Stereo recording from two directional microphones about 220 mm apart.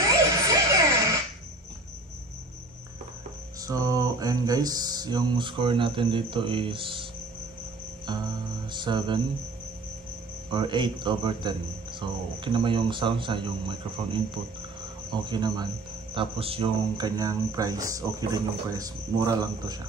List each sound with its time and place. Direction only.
0.5 s music: 15° right (ahead or behind)
3.6 s speech: 15° right (ahead or behind)
8.7 s speech: 20° right (ahead or behind)
10.5 s speech: 20° right (ahead or behind)